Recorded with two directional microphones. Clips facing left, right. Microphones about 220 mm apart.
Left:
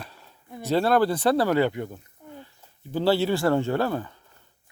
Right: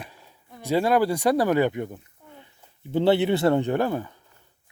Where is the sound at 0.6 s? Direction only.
10° right (ahead or behind).